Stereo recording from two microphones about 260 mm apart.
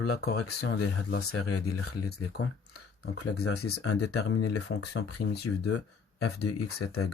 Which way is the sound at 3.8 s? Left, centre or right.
Left.